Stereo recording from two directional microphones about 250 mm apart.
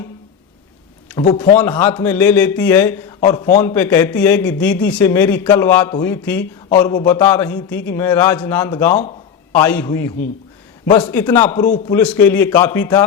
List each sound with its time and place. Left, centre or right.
1.3 s a man's voice: centre